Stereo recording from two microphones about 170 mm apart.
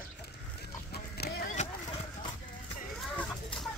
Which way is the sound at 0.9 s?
65° left (ahead or behind).